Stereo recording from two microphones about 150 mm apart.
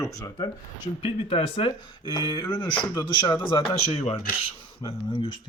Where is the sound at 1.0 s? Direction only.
40° left (ahead or behind).